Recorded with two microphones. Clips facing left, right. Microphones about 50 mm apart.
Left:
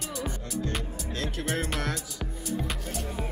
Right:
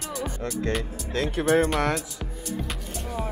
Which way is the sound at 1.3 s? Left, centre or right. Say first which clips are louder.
Right 11 dB; right.